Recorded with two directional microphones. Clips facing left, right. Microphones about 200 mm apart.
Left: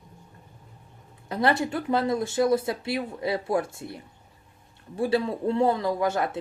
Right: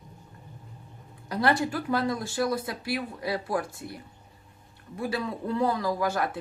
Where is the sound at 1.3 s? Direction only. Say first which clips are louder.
Left 1 dB; 25° left (ahead or behind).